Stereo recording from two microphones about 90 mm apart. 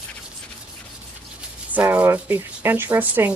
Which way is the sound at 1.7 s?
15° right (ahead or behind).